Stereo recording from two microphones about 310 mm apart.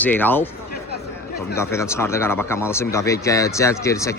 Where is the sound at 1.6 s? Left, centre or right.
Centre.